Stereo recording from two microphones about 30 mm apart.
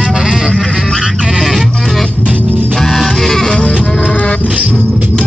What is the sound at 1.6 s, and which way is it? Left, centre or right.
Music, centre.